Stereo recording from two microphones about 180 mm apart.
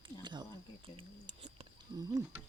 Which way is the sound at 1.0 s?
35° right (ahead or behind).